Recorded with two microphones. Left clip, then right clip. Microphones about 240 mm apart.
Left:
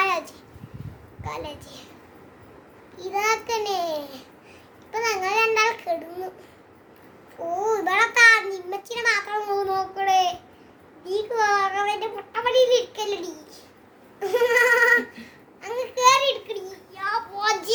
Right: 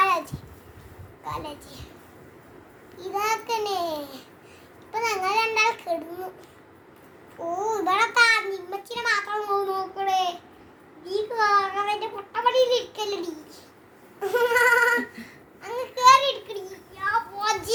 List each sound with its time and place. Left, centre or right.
0.0 s a sound: centre
1.2 s a child's voice: centre
3.0 s a child's voice: centre
7.7 s a child's voice: centre